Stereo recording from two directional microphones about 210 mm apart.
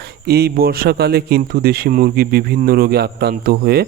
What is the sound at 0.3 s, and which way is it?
Speech, 50° right (ahead or behind).